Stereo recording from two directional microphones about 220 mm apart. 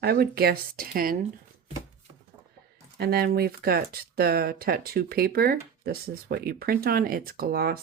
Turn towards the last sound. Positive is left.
turn(degrees=-45)  # may be behind; listen again after turning